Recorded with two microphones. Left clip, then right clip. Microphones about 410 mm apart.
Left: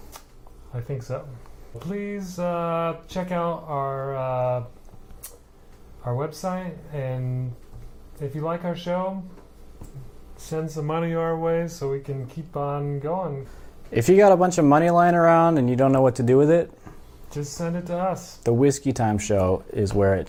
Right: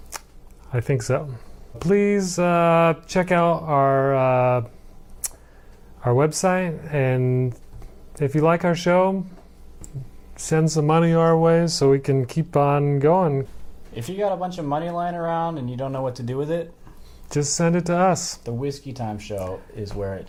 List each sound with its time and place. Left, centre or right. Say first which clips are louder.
0.7 s speech: right 9 dB; right
1.8 s speech: right 13 dB; right
6.0 s speech: right 9 dB; right
10.3 s speech: right 8 dB; right
13.9 s speech: left 10 dB; left
17.2 s speech: right 8 dB; right
18.4 s speech: left 9 dB; left